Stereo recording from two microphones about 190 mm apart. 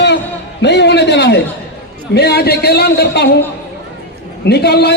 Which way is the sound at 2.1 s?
60° left (ahead or behind).